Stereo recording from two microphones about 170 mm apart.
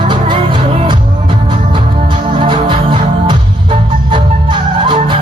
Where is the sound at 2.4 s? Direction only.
30° right (ahead or behind).